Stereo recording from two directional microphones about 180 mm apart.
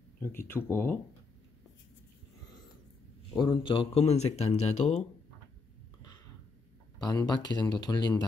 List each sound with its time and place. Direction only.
0.2 s speech: 15° left (ahead or behind)
3.3 s speech: 25° left (ahead or behind)
7.0 s speech: 20° left (ahead or behind)